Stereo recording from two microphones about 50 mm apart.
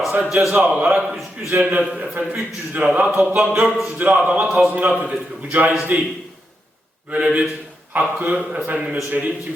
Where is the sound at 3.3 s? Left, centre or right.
Centre.